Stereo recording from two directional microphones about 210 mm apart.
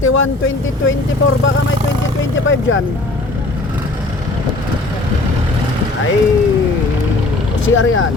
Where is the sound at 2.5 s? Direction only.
70° left (ahead or behind).